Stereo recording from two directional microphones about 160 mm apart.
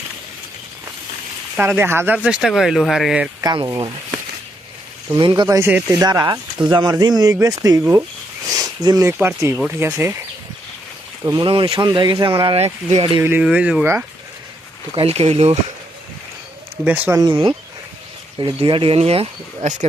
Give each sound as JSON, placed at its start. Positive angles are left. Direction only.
{"t": 1.5, "sound": "speech", "side_deg": -10}
{"t": 3.4, "sound": "speech", "side_deg": -25}
{"t": 5.1, "sound": "speech", "side_deg": -30}
{"t": 8.5, "sound": "a sound", "side_deg": -25}
{"t": 9.2, "sound": "speech", "side_deg": -15}
{"t": 11.3, "sound": "speech", "side_deg": -30}
{"t": 13.1, "sound": "speech", "side_deg": -15}
{"t": 14.9, "sound": "speech", "side_deg": -40}
{"t": 16.8, "sound": "speech", "side_deg": -10}
{"t": 17.2, "sound": "speech", "side_deg": -30}